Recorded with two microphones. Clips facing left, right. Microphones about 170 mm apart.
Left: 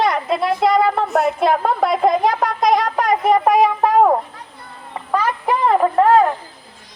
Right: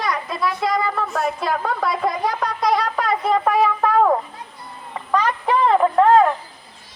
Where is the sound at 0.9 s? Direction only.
30° left (ahead or behind).